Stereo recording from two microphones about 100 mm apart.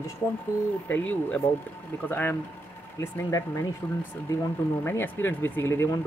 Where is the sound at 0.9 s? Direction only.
15° left (ahead or behind).